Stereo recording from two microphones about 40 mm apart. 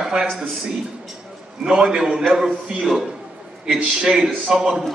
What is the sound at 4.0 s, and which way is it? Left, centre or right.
Speech, centre.